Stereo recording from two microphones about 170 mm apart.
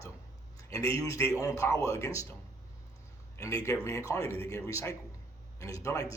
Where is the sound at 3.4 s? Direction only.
20° left (ahead or behind).